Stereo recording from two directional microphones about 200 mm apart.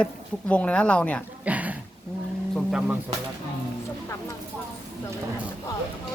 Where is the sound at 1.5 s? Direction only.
5° right (ahead or behind).